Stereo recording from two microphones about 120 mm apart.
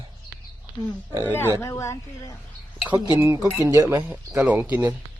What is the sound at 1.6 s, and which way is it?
Speech, 25° left (ahead or behind).